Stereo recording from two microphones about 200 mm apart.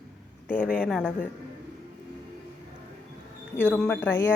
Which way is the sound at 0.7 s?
5° left (ahead or behind).